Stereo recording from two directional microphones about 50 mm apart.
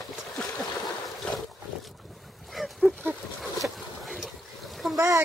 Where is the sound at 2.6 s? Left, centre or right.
Centre.